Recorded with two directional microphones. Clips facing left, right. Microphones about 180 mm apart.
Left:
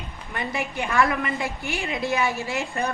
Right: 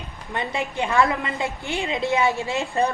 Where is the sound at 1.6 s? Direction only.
20° right (ahead or behind).